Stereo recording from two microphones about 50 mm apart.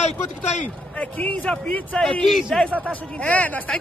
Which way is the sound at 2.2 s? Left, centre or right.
Centre.